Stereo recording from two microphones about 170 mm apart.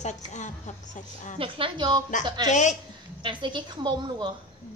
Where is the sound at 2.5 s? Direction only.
45° left (ahead or behind).